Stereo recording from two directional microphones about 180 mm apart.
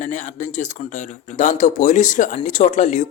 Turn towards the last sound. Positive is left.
turn(degrees=40)  # may be behind; listen again after turning